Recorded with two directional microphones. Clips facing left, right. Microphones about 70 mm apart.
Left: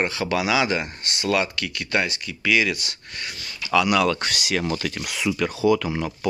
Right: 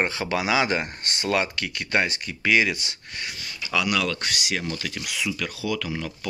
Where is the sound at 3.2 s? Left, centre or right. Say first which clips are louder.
Even; centre.